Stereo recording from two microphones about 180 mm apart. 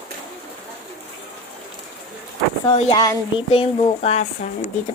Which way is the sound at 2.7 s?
35° left (ahead or behind).